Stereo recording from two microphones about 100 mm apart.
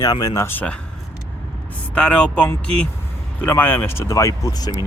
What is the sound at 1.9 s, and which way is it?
Speech, 10° left (ahead or behind).